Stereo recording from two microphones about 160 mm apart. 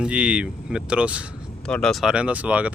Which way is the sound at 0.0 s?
5° right (ahead or behind).